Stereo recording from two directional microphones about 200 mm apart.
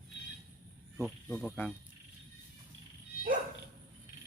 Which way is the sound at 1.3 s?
10° left (ahead or behind).